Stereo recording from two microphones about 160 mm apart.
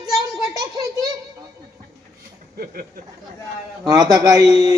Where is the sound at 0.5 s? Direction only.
25° right (ahead or behind).